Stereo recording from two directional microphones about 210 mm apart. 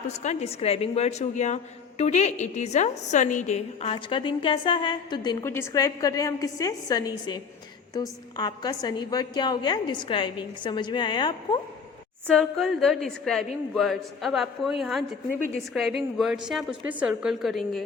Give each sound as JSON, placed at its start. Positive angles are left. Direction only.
{"t": 0.1, "sound": "a woman's voice", "side_deg": 30}
{"t": 12.3, "sound": "a woman's voice", "side_deg": 0}